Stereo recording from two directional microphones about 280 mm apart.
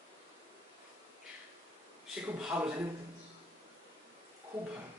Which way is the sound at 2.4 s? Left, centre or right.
Centre.